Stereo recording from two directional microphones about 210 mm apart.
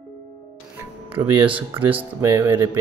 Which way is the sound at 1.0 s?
25° right (ahead or behind).